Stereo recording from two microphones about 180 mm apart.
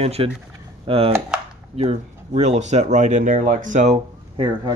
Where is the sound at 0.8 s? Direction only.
30° right (ahead or behind).